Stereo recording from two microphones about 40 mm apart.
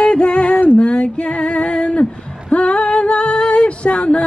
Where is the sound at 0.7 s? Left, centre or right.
Left.